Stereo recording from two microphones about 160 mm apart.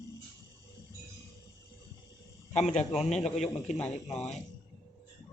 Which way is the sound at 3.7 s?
5° left (ahead or behind).